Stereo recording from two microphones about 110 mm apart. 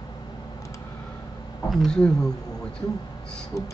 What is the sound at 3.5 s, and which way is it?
Beatboxing, 30° left (ahead or behind).